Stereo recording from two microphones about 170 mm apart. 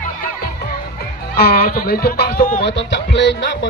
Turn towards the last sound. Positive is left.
turn(degrees=90)